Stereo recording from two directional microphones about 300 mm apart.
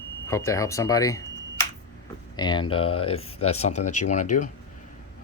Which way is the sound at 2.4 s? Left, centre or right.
Centre.